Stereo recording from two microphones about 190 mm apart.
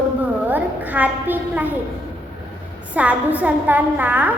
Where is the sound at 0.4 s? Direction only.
10° right (ahead or behind).